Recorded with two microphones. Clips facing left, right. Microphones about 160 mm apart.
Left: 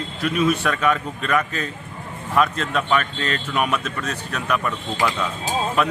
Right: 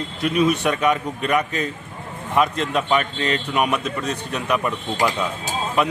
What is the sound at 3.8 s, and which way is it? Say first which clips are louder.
Speech: right 3 dB; 35° right (ahead or behind).